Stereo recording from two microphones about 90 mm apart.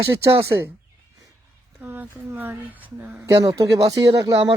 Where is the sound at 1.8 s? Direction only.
25° right (ahead or behind).